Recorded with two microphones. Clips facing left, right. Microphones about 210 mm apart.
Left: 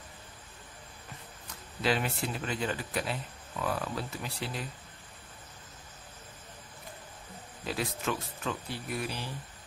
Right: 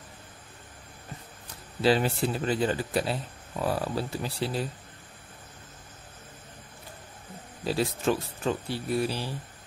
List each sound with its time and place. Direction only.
1.8 s speech: 30° right (ahead or behind)
7.6 s speech: 30° right (ahead or behind)